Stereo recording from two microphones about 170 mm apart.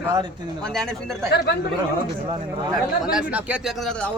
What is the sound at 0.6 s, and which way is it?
Speech, 5° left (ahead or behind).